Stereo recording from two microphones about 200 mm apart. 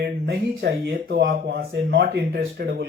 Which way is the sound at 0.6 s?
55° right (ahead or behind).